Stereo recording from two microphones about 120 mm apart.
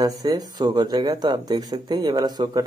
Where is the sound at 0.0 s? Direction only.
30° right (ahead or behind).